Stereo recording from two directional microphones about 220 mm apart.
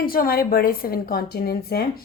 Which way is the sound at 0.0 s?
40° left (ahead or behind).